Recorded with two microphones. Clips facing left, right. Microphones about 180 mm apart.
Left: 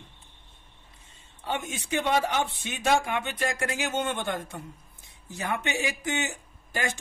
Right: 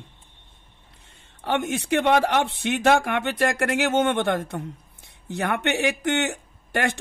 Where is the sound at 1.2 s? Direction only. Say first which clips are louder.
Right 7 dB; 65° right (ahead or behind).